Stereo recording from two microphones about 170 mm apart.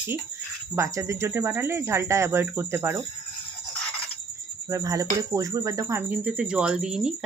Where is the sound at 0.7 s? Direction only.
15° right (ahead or behind).